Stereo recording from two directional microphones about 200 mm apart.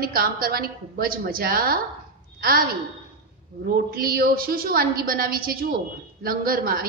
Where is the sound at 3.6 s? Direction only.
50° right (ahead or behind).